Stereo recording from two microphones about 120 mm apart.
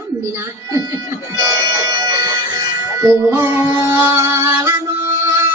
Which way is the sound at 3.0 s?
20° right (ahead or behind).